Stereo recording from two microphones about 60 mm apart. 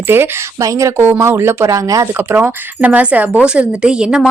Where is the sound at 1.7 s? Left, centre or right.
Right.